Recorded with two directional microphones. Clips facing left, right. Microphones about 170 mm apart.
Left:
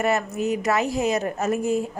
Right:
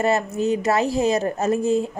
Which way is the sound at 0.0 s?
30° right (ahead or behind).